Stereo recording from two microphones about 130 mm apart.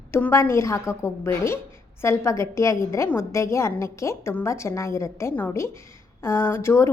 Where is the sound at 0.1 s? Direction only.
20° left (ahead or behind).